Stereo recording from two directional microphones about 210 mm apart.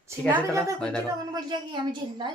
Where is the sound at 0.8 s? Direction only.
5° left (ahead or behind).